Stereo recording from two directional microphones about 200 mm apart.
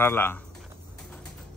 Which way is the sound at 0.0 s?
10° left (ahead or behind).